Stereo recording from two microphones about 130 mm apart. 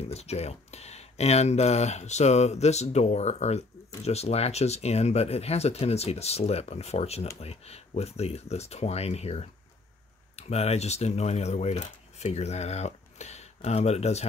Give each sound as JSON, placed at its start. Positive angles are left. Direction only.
{"t": 0.0, "sound": "speech", "side_deg": 55}